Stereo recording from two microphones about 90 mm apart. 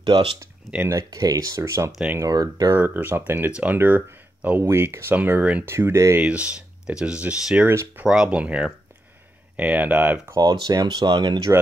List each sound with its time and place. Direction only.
0.0 s speech: 70° right (ahead or behind)
1.1 s speech: 40° right (ahead or behind)
2.8 s speech: 25° right (ahead or behind)
4.6 s speech: 30° right (ahead or behind)
5.7 s speech: 30° right (ahead or behind)
6.1 s speech: 15° right (ahead or behind)
7.6 s speech: 25° right (ahead or behind)
8.0 s speech: 10° right (ahead or behind)
10.3 s speech: 45° right (ahead or behind)